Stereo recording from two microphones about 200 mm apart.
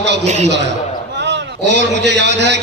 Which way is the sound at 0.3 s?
35° right (ahead or behind).